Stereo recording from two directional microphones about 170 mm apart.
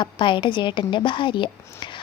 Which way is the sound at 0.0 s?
30° left (ahead or behind).